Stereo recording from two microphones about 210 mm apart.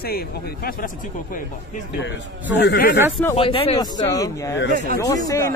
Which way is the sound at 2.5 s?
50° left (ahead or behind).